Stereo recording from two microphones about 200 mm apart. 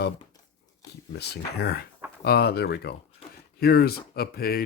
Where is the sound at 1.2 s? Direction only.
55° left (ahead or behind).